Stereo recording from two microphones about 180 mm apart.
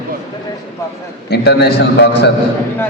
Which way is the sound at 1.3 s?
65° left (ahead or behind).